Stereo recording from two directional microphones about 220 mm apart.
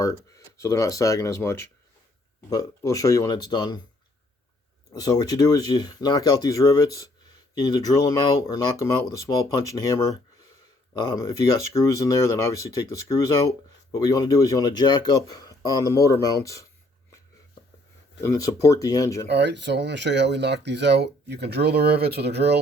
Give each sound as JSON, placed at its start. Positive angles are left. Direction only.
{"t": 0.0, "sound": "speech", "side_deg": 15}
{"t": 4.9, "sound": "speech", "side_deg": 15}
{"t": 18.2, "sound": "speech", "side_deg": 15}
{"t": 19.3, "sound": "speech", "side_deg": -50}